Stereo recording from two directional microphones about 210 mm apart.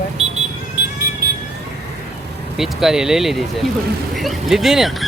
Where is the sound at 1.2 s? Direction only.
45° right (ahead or behind).